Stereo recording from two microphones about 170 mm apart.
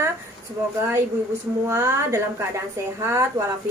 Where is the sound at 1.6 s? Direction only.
15° right (ahead or behind).